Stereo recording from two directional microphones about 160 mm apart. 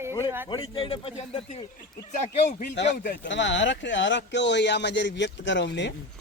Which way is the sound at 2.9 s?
60° left (ahead or behind).